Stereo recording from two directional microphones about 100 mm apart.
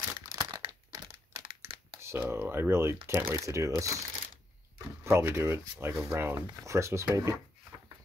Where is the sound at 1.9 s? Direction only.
25° right (ahead or behind).